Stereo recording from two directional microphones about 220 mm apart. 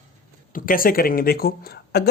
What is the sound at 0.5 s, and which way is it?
Speech, 40° left (ahead or behind).